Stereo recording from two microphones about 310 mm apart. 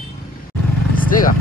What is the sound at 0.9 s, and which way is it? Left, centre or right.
Vehicle, left.